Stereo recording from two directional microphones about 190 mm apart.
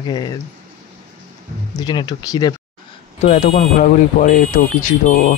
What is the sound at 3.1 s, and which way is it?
Speech, 35° left (ahead or behind).